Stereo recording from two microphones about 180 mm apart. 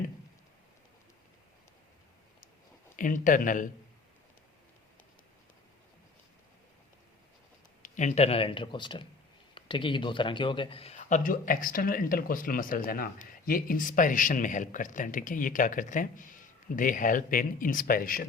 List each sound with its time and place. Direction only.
2.9 s a man's voice: 45° left (ahead or behind)
7.8 s a man's voice: 40° left (ahead or behind)